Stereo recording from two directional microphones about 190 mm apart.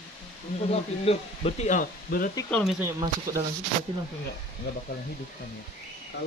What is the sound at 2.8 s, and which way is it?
Speech, 15° right (ahead or behind).